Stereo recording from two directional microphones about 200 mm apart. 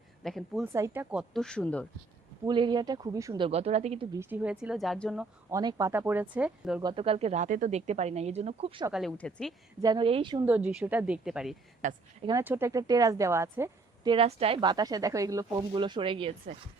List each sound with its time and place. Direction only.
0.2 s a woman's voice: centre (ahead or behind)
0.6 s a woman's voice: 10° right (ahead or behind)
1.3 s a woman's voice: 5° left (ahead or behind)
2.4 s speech: 20° right (ahead or behind)
4.1 s a woman's voice: 10° right (ahead or behind)
5.5 s a woman's voice: 15° right (ahead or behind)
6.8 s speech: 25° right (ahead or behind)
8.9 s a woman's voice: centre (ahead or behind)
9.8 s speech: 25° right (ahead or behind)
10.4 s a woman's voice: 10° right (ahead or behind)
11.8 s speech: 35° right (ahead or behind)
12.4 s a woman's voice: 10° right (ahead or behind)
14.1 s speech: 30° right (ahead or behind)